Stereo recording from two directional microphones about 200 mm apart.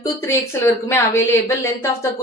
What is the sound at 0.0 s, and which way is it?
Speech, 15° left (ahead or behind).